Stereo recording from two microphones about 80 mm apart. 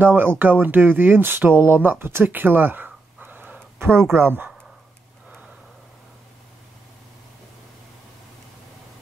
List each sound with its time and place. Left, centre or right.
0.0 s speech: right